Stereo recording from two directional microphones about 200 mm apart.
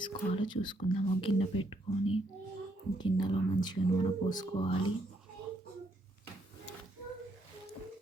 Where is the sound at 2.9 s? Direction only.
25° left (ahead or behind).